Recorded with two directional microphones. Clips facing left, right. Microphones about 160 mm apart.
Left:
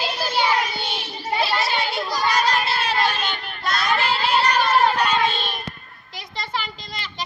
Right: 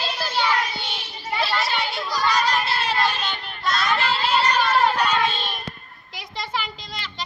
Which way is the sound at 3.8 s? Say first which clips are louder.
Left 2 dB; centre (ahead or behind).